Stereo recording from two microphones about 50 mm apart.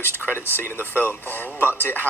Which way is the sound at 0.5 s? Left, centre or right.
Left.